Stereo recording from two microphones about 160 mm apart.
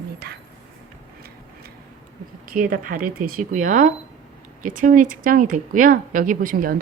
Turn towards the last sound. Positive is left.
turn(degrees=-60)  # may be behind; listen again after turning